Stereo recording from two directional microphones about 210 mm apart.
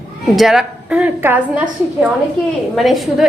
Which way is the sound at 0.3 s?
Centre (ahead or behind).